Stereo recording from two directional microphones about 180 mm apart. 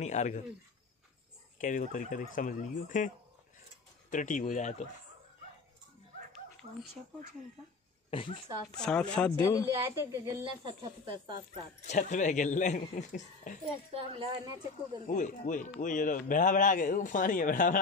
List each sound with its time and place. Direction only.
0.0 s speech: 40° left (ahead or behind)
1.6 s speech: 45° left (ahead or behind)
4.1 s speech: 45° left (ahead or behind)
8.1 s speech: 30° left (ahead or behind)
8.7 s speech: 5° left (ahead or behind)
9.8 s a woman's voice: 20° right (ahead or behind)
11.9 s speech: 45° left (ahead or behind)
13.9 s a woman's voice: 30° right (ahead or behind)
15.0 s speech: 45° left (ahead or behind)